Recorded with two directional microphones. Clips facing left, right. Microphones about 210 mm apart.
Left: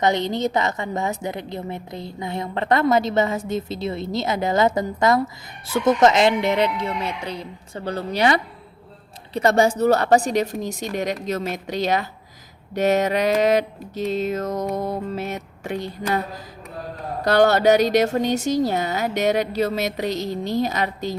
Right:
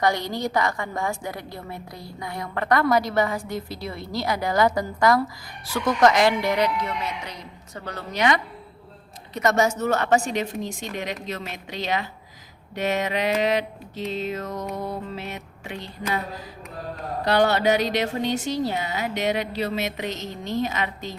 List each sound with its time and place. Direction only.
0.0 s a woman's voice: 20° left (ahead or behind); by 16.2 s 45° left (ahead or behind)
17.2 s speech: 45° left (ahead or behind)